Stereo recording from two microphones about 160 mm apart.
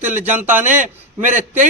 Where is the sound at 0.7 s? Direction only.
50° right (ahead or behind).